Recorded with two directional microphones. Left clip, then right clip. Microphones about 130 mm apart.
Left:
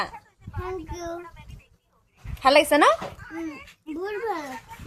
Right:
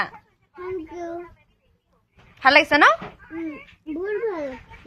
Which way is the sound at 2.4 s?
25° left (ahead or behind).